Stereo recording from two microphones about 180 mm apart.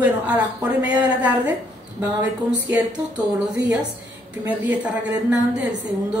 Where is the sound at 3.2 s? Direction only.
10° right (ahead or behind).